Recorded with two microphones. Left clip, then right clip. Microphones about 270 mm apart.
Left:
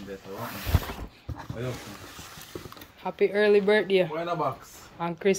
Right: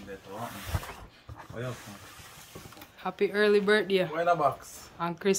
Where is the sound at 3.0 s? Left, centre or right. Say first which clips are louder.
Left 3 dB; centre.